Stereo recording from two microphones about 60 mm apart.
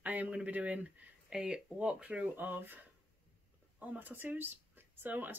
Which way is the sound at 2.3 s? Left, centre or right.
Right.